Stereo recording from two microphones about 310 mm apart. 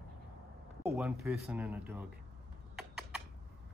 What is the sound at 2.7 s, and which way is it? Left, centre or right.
Typing, centre.